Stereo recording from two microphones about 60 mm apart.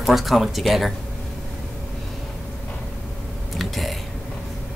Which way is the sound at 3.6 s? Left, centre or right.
Centre.